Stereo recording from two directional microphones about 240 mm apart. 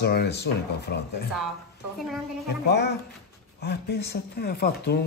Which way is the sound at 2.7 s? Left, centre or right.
Left.